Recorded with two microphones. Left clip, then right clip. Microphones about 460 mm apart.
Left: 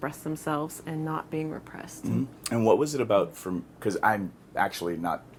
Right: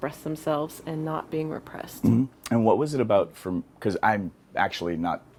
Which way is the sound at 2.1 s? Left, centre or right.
Right.